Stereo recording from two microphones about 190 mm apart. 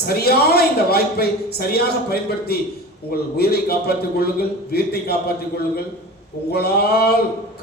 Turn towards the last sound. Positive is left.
turn(degrees=55)  # may be behind; listen again after turning